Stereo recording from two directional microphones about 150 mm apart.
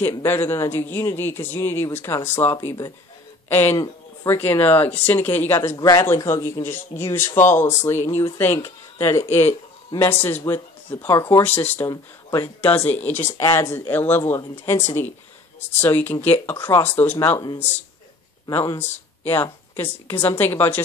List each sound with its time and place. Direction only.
0.2 s speech: 15° left (ahead or behind)
3.7 s speech: 25° left (ahead or behind)
4.4 s speech: 10° left (ahead or behind)
11.9 s speech: 25° left (ahead or behind)
12.6 s speech: 10° left (ahead or behind)
18.8 s speech: 15° left (ahead or behind)